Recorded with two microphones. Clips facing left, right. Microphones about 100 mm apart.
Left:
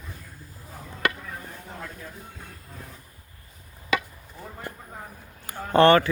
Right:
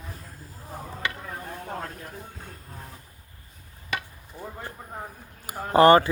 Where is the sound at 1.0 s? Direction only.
65° left (ahead or behind).